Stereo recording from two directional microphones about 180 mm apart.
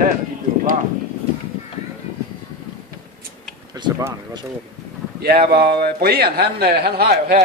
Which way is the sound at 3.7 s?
20° right (ahead or behind).